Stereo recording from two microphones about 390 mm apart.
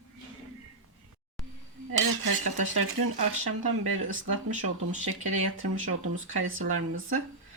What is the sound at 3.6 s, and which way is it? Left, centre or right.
Speech, right.